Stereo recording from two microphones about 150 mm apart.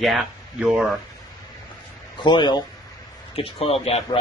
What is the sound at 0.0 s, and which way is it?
A man's voice, centre (ahead or behind).